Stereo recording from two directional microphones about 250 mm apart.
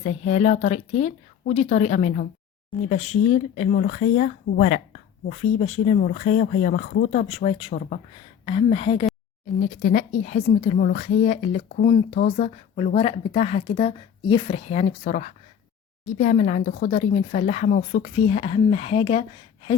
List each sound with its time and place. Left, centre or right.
0.0 s a woman's voice: left
8.4 s a woman's voice: left